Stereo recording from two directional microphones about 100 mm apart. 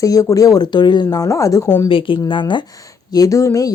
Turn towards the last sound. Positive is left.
turn(degrees=35)  # may be behind; listen again after turning